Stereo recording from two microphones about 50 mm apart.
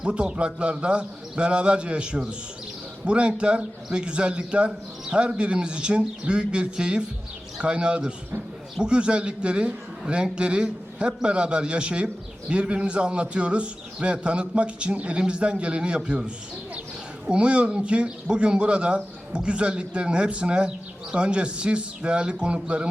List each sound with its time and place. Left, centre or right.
0.0 s speech: centre